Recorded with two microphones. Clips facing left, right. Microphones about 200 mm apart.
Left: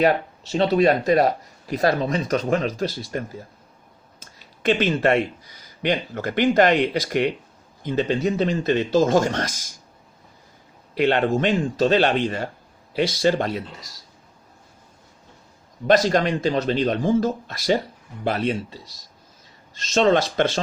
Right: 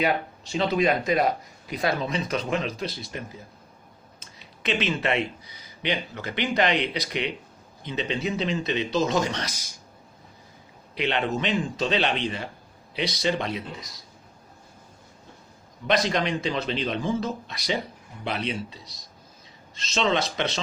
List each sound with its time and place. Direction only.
0.0 s speech: 40° left (ahead or behind)
10.9 s speech: 45° left (ahead or behind)
16.0 s speech: 45° left (ahead or behind)
19.7 s speech: 45° left (ahead or behind)